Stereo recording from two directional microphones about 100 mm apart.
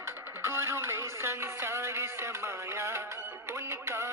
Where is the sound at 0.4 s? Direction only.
25° right (ahead or behind).